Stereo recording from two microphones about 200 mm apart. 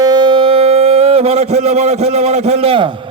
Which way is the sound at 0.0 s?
20° right (ahead or behind).